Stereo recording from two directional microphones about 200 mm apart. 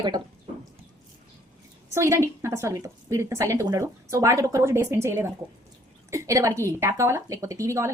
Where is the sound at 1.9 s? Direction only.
15° right (ahead or behind).